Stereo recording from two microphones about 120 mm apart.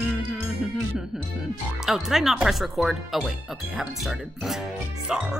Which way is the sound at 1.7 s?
5° right (ahead or behind).